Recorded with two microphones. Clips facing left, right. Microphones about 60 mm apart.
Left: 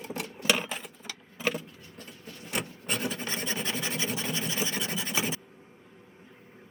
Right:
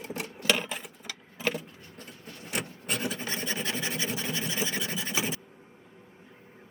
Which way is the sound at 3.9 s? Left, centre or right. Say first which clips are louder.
Even; centre.